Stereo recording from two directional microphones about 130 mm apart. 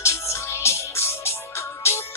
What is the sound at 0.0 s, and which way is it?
Music, 20° left (ahead or behind).